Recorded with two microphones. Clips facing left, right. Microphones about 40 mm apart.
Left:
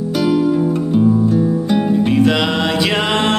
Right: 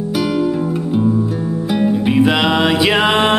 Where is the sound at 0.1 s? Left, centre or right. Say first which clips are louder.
Left 3 dB; centre.